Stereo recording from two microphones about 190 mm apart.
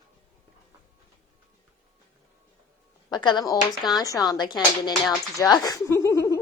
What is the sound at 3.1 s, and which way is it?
Speech, 20° left (ahead or behind).